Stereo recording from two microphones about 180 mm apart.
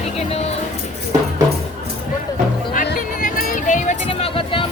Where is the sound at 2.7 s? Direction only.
50° left (ahead or behind); by 4.6 s 30° left (ahead or behind).